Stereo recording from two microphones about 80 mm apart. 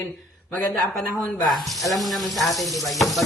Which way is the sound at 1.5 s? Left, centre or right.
Centre.